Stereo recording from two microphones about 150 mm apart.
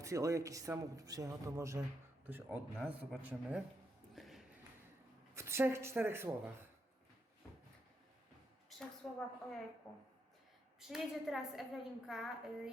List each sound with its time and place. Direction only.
0.0 s speech: 20° right (ahead or behind)
2.7 s a woman's voice: 5° left (ahead or behind)
3.2 s speech: 10° right (ahead or behind)
4.1 s a sound: centre (ahead or behind)
5.3 s speech: 20° right (ahead or behind)
9.0 s a woman's voice: 5° left (ahead or behind)